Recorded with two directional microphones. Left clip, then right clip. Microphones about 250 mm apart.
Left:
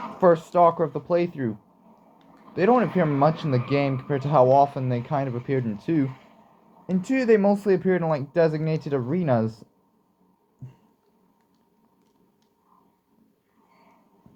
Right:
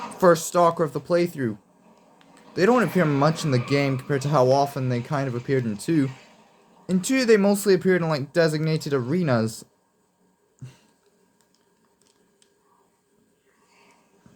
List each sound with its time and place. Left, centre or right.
0.2 s speech: right